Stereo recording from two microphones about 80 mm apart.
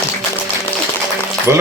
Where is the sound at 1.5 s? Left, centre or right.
Right.